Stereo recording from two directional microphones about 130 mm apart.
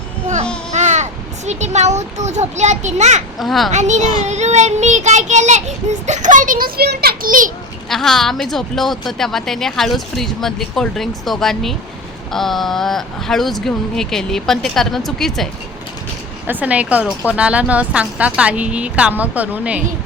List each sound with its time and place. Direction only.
0.7 s a child's voice: 65° right (ahead or behind)
3.3 s speech: centre (ahead or behind)
3.7 s a child's voice: 65° right (ahead or behind); by 7.5 s 90° right
7.9 s speech: 5° left (ahead or behind)
16.5 s speech: 10° right (ahead or behind)